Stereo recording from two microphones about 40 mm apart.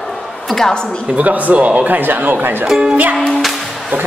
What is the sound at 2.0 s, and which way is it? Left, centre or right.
Speech, right.